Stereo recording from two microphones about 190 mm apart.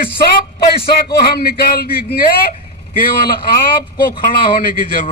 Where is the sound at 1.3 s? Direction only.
55° left (ahead or behind).